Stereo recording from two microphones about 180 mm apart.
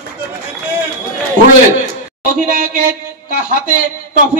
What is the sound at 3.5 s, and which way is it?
Speech, 50° right (ahead or behind).